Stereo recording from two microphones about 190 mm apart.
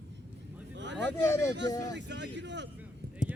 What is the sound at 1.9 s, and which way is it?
Speech, 65° right (ahead or behind).